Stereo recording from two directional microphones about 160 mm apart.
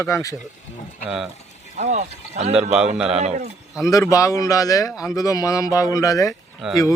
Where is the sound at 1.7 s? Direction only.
45° right (ahead or behind).